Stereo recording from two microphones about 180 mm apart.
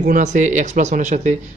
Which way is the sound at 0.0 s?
45° right (ahead or behind).